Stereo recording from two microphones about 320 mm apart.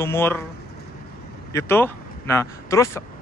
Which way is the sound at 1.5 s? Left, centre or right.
Centre.